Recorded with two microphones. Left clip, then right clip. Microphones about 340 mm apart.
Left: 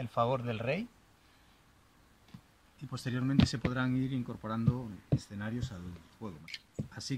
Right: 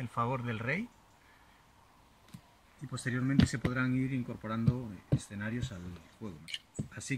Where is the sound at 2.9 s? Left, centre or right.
Centre.